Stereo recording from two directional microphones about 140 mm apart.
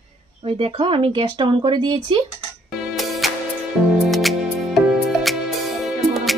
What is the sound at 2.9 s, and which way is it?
Music, centre (ahead or behind).